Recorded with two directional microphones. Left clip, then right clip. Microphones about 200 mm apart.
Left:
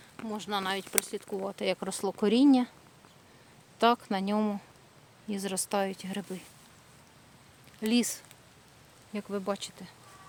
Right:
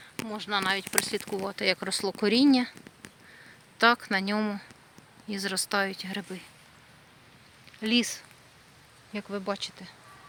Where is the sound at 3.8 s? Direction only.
5° left (ahead or behind).